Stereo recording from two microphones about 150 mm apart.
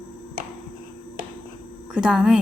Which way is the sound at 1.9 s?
5° right (ahead or behind).